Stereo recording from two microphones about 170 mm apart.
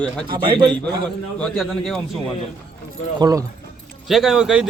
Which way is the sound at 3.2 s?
20° right (ahead or behind).